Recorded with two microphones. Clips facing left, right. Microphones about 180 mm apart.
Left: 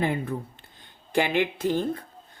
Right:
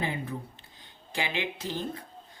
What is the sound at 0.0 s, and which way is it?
Speech, 55° left (ahead or behind).